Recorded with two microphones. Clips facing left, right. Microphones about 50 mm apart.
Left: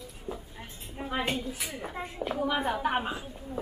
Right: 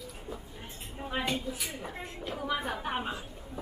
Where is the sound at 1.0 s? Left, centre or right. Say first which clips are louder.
Left 3 dB; left.